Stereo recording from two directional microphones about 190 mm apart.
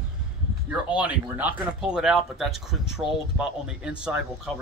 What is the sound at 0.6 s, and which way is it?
Speech, 5° right (ahead or behind).